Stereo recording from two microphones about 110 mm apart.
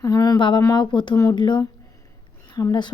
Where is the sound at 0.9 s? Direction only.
45° left (ahead or behind).